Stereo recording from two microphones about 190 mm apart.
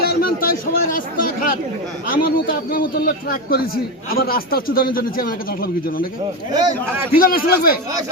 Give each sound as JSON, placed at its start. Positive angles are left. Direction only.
{"t": 0.0, "sound": "speech", "side_deg": 50}
{"t": 2.0, "sound": "a man's voice", "side_deg": 50}
{"t": 6.5, "sound": "a man's voice", "side_deg": -20}
{"t": 7.1, "sound": "a man's voice", "side_deg": 50}